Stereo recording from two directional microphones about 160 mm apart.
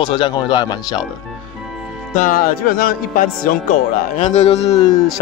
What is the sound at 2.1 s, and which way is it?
Speech, 55° left (ahead or behind).